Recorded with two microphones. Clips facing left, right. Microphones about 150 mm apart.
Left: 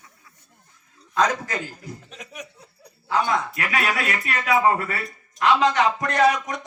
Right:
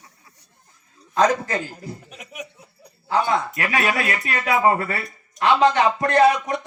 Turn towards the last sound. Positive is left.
turn(degrees=-30)  # may be behind; listen again after turning